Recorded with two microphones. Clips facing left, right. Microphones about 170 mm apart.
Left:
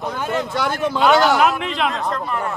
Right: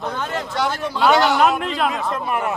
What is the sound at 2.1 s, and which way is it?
Speech, 15° right (ahead or behind).